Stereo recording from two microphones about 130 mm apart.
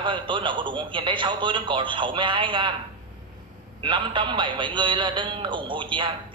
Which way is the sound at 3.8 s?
40° right (ahead or behind).